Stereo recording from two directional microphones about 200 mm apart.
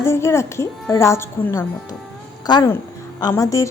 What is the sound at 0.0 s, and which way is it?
A woman's voice, 15° left (ahead or behind).